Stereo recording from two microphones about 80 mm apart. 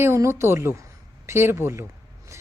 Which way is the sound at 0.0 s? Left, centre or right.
Right.